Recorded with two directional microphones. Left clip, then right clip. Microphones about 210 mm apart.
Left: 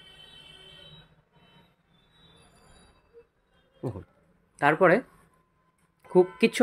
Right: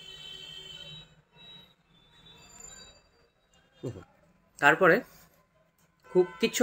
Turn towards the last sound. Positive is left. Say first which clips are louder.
# left 4 dB
turn(degrees=45)  # may be behind; listen again after turning